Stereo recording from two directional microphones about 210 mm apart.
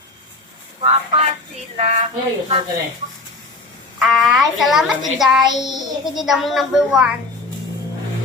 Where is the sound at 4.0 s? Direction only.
Centre (ahead or behind).